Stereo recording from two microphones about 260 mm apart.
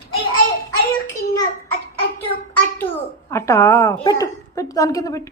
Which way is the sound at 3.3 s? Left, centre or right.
Centre.